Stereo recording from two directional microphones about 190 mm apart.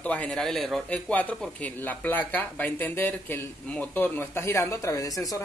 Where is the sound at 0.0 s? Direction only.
5° left (ahead or behind).